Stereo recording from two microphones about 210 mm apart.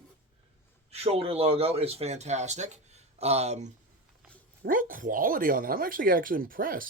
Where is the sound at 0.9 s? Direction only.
30° right (ahead or behind).